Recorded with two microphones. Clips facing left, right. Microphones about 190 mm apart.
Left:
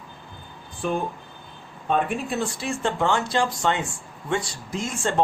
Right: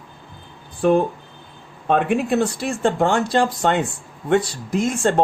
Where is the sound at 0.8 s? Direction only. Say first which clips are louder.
Right 10 dB; 70° right (ahead or behind).